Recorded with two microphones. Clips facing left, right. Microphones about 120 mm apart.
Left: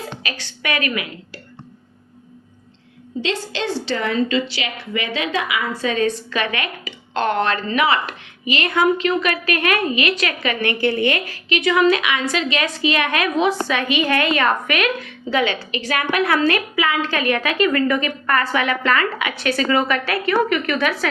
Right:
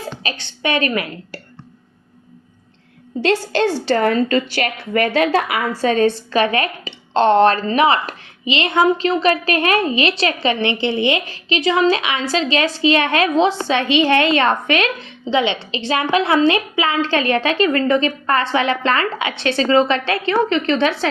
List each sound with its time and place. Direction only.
0.0 s a woman's voice: 30° right (ahead or behind)
3.2 s a woman's voice: 45° right (ahead or behind); by 21.1 s 30° right (ahead or behind)